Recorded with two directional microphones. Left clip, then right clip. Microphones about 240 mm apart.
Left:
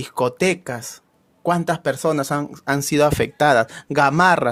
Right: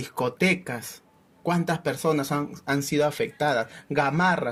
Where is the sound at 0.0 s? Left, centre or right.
Left.